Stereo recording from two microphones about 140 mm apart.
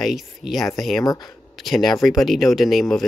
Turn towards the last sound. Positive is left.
turn(degrees=0)  # may be behind; listen again after turning